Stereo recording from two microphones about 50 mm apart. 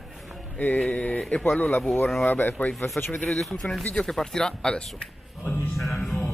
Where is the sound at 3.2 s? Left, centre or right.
Centre.